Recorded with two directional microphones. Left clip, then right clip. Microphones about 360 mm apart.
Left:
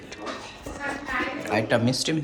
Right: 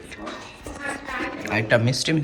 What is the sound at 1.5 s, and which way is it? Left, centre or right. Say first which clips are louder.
Speech: right 3 dB; centre.